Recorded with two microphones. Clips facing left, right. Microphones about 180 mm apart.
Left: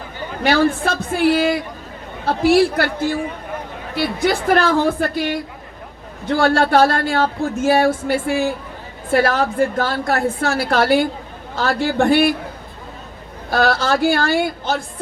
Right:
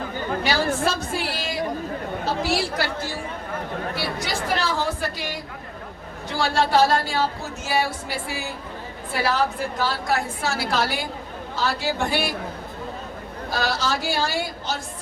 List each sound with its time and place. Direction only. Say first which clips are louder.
0.4 s speech: left 8 dB; 55° left (ahead or behind)
3.9 s speech: left 9 dB; 55° left (ahead or behind)
13.5 s speech: left 8 dB; 55° left (ahead or behind)